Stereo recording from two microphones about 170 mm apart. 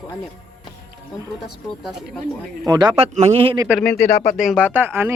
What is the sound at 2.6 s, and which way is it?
Speech, 25° right (ahead or behind).